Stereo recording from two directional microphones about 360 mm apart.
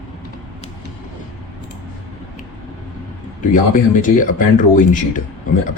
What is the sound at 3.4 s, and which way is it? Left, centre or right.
Speech, left.